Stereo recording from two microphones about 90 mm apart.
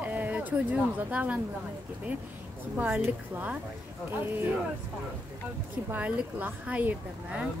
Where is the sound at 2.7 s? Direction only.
20° right (ahead or behind).